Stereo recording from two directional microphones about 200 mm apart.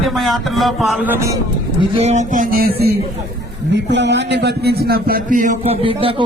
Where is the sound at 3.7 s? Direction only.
60° right (ahead or behind).